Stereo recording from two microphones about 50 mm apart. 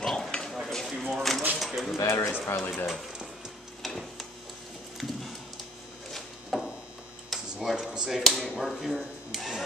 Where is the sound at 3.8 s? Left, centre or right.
Centre.